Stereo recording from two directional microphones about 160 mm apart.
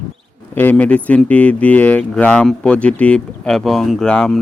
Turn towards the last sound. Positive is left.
turn(degrees=5)  # may be behind; listen again after turning